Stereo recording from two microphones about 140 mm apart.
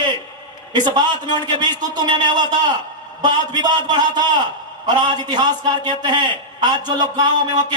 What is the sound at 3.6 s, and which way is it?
A man's voice, 30° right (ahead or behind).